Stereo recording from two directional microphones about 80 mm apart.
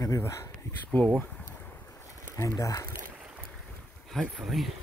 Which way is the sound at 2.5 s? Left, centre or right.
Left.